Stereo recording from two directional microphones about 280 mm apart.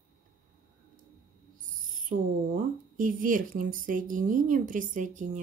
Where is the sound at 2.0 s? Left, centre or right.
Right.